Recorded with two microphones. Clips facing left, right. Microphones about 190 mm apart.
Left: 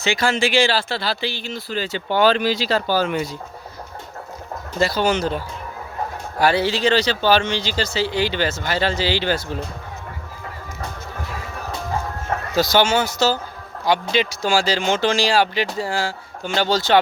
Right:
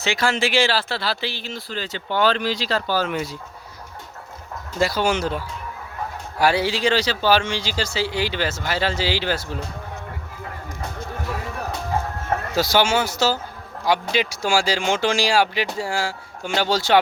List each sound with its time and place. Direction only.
0.0 s speech: centre (ahead or behind)
4.8 s speech: 10° right (ahead or behind)
6.4 s speech: 10° right (ahead or behind)
12.5 s speech: 10° right (ahead or behind)